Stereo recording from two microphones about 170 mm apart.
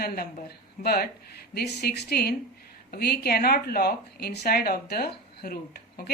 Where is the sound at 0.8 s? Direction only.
65° left (ahead or behind).